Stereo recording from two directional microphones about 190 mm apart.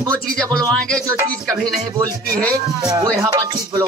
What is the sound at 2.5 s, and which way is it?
Music, 15° right (ahead or behind).